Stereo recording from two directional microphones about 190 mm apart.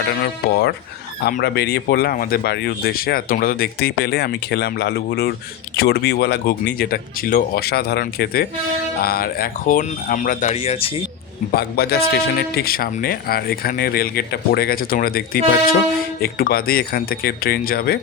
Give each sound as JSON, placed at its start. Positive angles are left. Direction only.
{"t": 0.1, "sound": "speech", "side_deg": 55}
{"t": 10.5, "sound": "speech", "side_deg": 30}
{"t": 11.5, "sound": "speech", "side_deg": 55}